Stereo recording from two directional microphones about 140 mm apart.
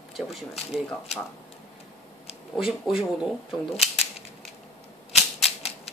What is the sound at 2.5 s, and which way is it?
Speech, centre (ahead or behind).